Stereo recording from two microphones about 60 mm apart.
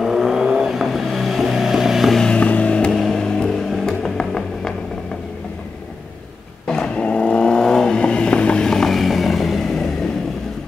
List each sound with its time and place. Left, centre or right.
0.0 s vehicle: centre
2.2 s creak: centre
3.0 s vehicle: centre
6.7 s vehicle: centre